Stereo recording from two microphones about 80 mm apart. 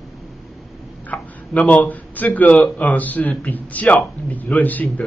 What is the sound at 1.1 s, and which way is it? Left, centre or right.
A man's voice, centre.